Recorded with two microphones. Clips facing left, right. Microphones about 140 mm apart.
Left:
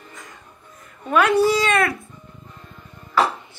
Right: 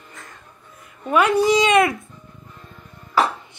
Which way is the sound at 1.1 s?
10° right (ahead or behind).